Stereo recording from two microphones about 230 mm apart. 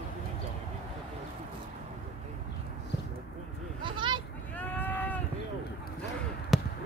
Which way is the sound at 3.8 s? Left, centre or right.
Right.